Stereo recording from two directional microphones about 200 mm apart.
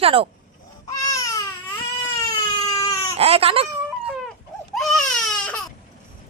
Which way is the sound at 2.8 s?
15° left (ahead or behind).